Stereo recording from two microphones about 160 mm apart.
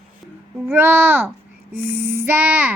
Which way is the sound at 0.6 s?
15° right (ahead or behind).